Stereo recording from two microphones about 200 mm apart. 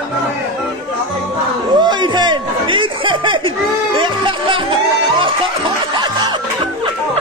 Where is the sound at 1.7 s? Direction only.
20° right (ahead or behind).